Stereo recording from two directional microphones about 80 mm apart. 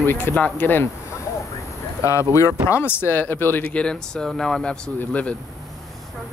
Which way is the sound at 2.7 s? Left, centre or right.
Left.